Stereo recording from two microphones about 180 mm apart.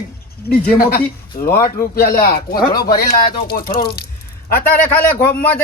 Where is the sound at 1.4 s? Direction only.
45° left (ahead or behind).